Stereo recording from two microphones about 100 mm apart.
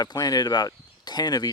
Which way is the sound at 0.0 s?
40° left (ahead or behind).